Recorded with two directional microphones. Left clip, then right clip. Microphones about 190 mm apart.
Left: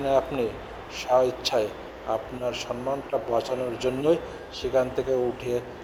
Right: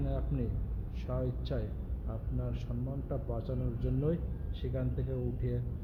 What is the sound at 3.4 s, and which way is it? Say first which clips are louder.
Speech: left 14 dB; 10° left (ahead or behind).